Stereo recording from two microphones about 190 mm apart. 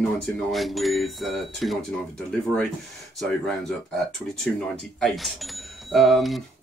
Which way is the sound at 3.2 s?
5° left (ahead or behind).